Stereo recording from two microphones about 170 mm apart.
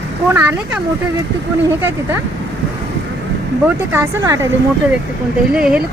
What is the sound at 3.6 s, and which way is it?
Speech, 15° right (ahead or behind).